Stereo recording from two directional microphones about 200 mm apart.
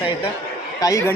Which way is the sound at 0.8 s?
15° left (ahead or behind).